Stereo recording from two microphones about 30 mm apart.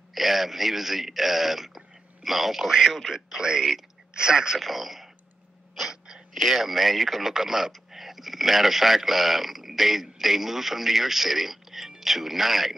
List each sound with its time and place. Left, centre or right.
0.1 s speech: centre
2.6 s a man's voice: centre
2.9 s speech: centre
3.3 s a man's voice: right
4.6 s speech: centre
5.8 s sneeze: centre
6.3 s speech: centre
7.3 s a man's voice: centre